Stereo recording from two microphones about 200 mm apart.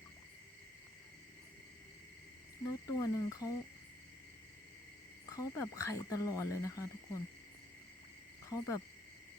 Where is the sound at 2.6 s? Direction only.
15° left (ahead or behind).